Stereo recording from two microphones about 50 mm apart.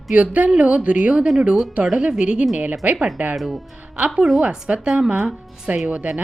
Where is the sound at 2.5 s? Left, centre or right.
Right.